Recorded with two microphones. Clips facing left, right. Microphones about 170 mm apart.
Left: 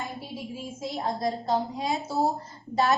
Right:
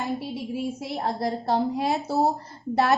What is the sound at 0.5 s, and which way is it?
A woman's voice, 65° right (ahead or behind).